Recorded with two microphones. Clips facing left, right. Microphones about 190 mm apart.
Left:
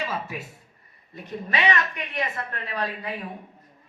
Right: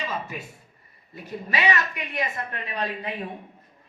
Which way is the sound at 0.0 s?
5° left (ahead or behind).